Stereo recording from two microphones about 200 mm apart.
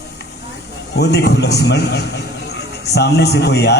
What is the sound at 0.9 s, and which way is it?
A man's voice, 55° left (ahead or behind).